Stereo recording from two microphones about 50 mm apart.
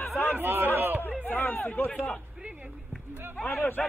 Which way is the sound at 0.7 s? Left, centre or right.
Right.